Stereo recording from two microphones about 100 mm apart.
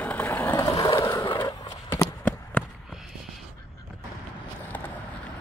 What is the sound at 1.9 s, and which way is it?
Run, 15° left (ahead or behind).